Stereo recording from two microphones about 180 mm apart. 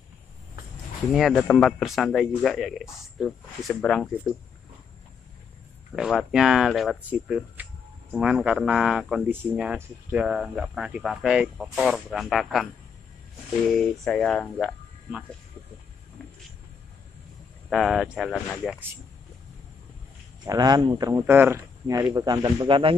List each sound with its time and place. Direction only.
1.1 s speech: centre (ahead or behind)
5.9 s speech: centre (ahead or behind)
13.7 s speech: 5° left (ahead or behind)
17.6 s speech: centre (ahead or behind)
20.4 s speech: 20° right (ahead or behind)